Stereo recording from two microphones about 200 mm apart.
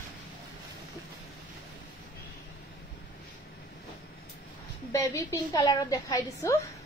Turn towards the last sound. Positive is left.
turn(degrees=15)  # may be behind; listen again after turning